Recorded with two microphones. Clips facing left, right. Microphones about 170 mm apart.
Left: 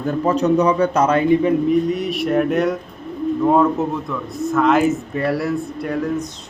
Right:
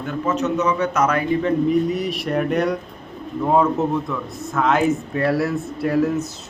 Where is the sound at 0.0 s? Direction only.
35° left (ahead or behind).